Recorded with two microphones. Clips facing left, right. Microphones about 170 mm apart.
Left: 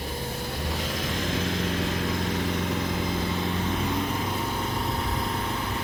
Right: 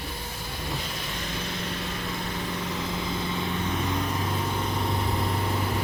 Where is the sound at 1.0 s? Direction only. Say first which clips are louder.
Left 6 dB; 90° left.